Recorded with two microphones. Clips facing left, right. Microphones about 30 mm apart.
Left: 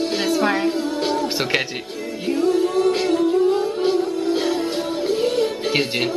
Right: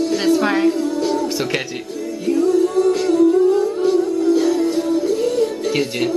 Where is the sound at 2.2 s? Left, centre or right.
Left.